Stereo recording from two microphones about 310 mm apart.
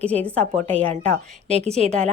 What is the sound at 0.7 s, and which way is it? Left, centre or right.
A woman's voice, centre.